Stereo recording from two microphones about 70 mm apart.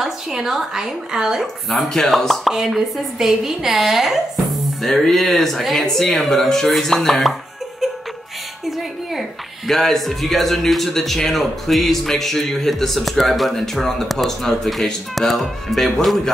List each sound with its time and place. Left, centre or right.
0.0 s a man's voice: centre
8.6 s a man's voice: centre